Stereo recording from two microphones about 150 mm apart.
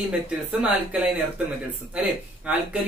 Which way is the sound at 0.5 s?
10° right (ahead or behind).